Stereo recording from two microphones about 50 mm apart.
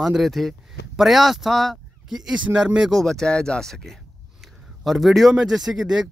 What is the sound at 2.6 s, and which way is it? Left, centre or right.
Speech, centre.